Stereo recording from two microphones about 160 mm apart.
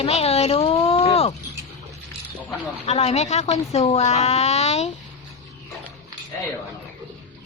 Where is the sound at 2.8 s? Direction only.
40° left (ahead or behind).